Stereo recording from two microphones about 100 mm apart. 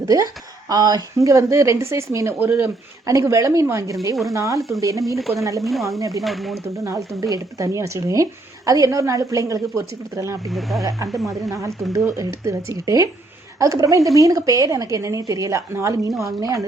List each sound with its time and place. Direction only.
0.0 s a woman's voice: 35° right (ahead or behind)
4.1 s speech: centre (ahead or behind)
4.4 s a woman's voice: 30° right (ahead or behind)
6.2 s speech: centre (ahead or behind)
7.2 s a woman's voice: 35° right (ahead or behind)
10.5 s speech: centre (ahead or behind)
10.8 s a woman's voice: 35° right (ahead or behind)